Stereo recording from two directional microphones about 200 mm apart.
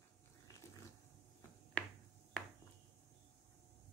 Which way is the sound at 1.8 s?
5° left (ahead or behind).